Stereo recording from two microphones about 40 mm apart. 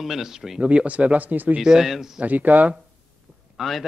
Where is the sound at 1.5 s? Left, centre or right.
Centre.